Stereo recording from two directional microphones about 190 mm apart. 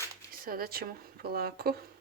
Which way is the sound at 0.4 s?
50° right (ahead or behind).